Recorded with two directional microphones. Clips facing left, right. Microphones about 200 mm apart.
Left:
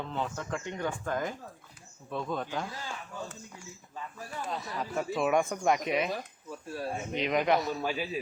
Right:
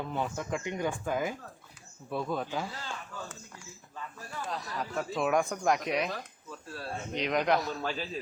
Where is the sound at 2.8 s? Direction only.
10° left (ahead or behind).